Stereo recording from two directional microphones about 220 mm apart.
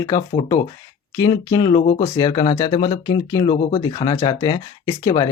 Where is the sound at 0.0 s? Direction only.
15° left (ahead or behind).